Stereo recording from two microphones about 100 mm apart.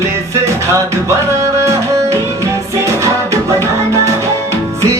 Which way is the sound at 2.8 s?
30° right (ahead or behind).